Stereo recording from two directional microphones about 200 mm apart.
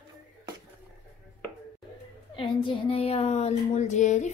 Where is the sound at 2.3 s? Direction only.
25° left (ahead or behind).